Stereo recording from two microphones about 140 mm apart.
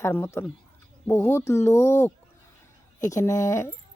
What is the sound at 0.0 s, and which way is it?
Speech, 15° left (ahead or behind).